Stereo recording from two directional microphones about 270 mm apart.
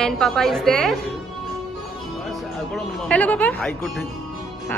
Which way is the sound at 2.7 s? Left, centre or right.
Centre.